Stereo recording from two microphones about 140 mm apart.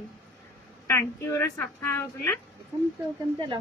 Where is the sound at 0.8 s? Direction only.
20° left (ahead or behind).